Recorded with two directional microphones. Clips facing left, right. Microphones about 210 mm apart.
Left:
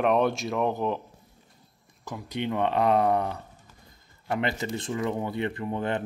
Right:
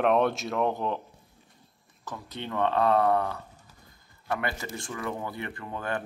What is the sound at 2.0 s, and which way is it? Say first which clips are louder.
Speech: left 6 dB; 10° left (ahead or behind).